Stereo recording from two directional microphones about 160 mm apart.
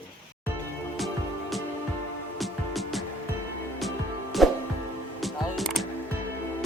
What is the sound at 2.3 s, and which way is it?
Music, centre (ahead or behind).